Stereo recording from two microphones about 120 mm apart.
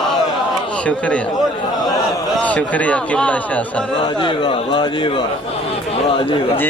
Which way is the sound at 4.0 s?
45° left (ahead or behind).